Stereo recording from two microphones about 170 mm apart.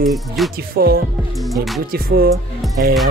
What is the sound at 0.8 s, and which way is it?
Speech, 65° right (ahead or behind).